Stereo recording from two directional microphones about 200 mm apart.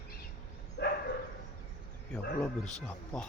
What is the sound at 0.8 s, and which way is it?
Dog, 60° left (ahead or behind).